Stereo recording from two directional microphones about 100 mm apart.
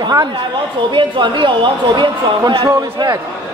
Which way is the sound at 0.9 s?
55° right (ahead or behind).